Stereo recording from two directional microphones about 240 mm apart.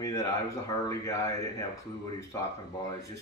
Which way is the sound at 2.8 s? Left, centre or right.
Centre.